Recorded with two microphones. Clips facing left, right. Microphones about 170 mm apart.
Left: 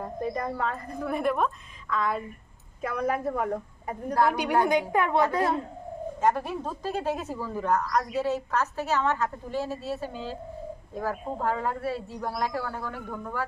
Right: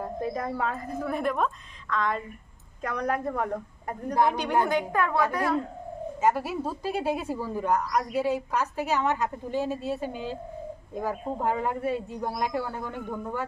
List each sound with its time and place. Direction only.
0.0 s a woman's voice: centre (ahead or behind); by 5.6 s 25° left (ahead or behind)
6.2 s a woman's voice: 5° right (ahead or behind)